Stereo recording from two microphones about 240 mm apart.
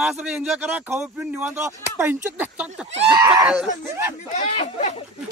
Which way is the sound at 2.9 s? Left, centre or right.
Centre.